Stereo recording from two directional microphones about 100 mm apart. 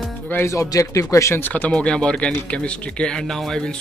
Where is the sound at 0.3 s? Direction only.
25° left (ahead or behind).